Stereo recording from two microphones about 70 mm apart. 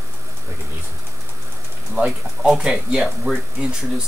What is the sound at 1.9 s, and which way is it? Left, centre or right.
Speech, centre.